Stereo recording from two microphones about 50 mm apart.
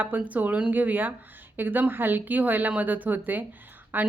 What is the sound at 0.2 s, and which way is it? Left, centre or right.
A woman's voice, right.